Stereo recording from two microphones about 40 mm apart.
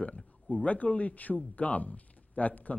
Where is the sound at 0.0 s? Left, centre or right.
Left.